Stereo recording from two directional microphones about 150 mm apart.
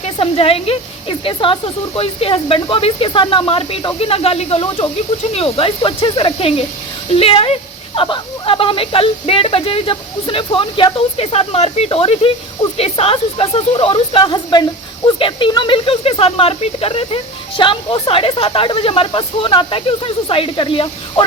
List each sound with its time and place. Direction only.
0.0 s speech: 40° left (ahead or behind)